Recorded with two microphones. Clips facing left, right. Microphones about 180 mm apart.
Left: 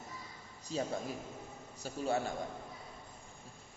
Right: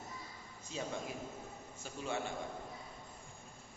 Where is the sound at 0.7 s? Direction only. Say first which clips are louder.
Left 4 dB; 35° left (ahead or behind).